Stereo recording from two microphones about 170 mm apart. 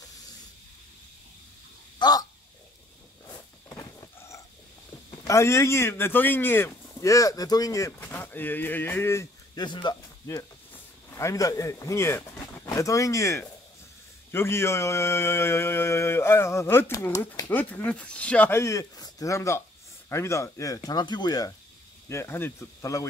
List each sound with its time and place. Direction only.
2.0 s crow: 25° left (ahead or behind)
3.6 s a sound: 20° left (ahead or behind)
5.2 s speech: 15° left (ahead or behind)
14.3 s mantra: 15° left (ahead or behind)
20.1 s speech: 15° left (ahead or behind)
22.1 s mantra: 15° left (ahead or behind)